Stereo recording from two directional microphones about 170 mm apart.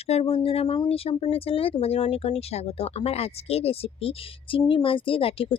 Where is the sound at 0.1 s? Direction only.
35° left (ahead or behind).